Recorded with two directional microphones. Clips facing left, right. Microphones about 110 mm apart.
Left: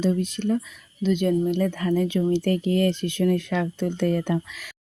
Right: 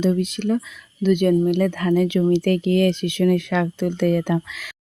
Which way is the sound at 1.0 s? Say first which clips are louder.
Right 5 dB; 65° right (ahead or behind).